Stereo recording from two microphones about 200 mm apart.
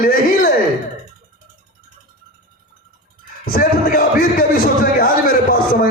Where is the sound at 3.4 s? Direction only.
45° left (ahead or behind).